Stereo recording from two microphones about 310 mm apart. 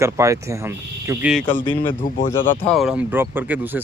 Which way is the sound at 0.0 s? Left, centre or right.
Centre.